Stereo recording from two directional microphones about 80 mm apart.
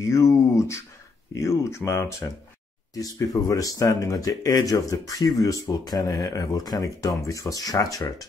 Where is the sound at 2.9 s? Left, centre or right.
Left.